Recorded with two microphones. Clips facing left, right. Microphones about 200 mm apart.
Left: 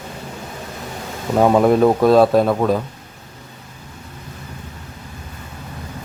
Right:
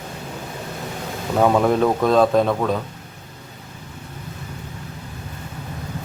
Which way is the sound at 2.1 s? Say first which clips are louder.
Left 2 dB; 5° left (ahead or behind).